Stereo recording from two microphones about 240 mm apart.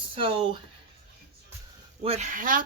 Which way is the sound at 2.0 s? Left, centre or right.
Right.